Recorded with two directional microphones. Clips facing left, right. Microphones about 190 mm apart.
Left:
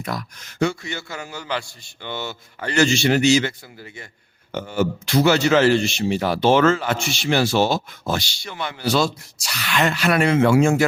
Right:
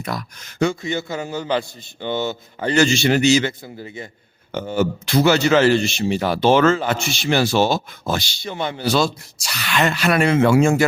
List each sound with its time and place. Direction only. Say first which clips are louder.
0.0 s speech: right 1 dB; 25° right (ahead or behind)